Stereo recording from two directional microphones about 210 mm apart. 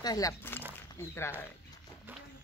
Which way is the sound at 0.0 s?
15° left (ahead or behind).